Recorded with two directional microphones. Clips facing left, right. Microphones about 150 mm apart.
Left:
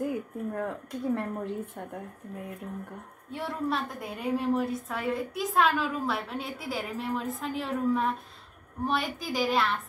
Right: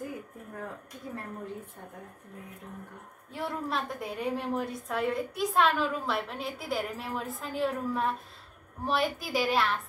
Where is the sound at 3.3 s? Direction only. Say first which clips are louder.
Left 2 dB; centre (ahead or behind).